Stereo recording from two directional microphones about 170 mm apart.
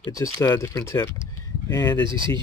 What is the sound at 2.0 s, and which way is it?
Speech, 30° right (ahead or behind).